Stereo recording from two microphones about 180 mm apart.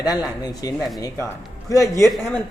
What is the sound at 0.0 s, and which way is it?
A woman's voice, 20° left (ahead or behind).